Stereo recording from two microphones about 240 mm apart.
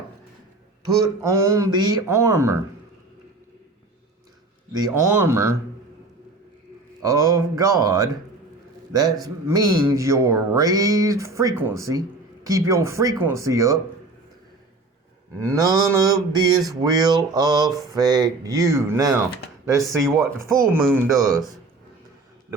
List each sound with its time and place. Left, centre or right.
0.9 s speech: centre
4.7 s speech: centre
7.0 s speech: centre
9.2 s speech: centre
15.5 s speech: centre